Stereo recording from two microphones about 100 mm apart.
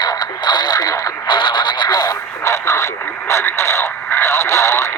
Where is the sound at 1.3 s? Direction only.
50° left (ahead or behind).